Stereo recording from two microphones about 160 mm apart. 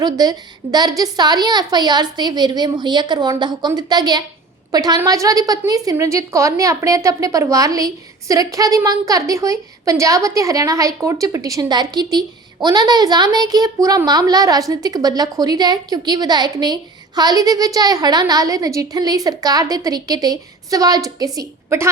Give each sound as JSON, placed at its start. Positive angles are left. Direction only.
{"t": 0.0, "sound": "a woman's voice", "side_deg": -25}